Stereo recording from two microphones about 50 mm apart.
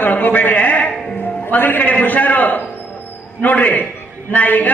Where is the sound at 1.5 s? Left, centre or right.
Left.